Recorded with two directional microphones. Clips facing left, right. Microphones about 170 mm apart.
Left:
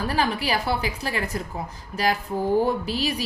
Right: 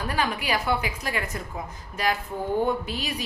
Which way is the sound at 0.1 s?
30° left (ahead or behind).